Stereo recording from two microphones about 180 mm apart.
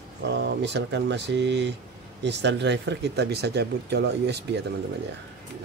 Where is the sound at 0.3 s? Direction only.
70° right (ahead or behind).